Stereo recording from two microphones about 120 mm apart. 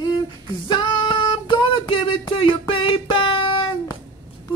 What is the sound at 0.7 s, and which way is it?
Music, 45° left (ahead or behind).